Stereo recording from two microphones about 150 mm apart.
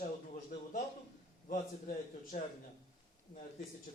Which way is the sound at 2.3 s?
55° left (ahead or behind).